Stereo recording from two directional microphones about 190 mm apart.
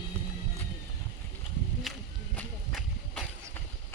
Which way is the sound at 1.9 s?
Centre (ahead or behind).